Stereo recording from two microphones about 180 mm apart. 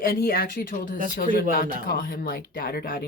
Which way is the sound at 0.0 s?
55° left (ahead or behind).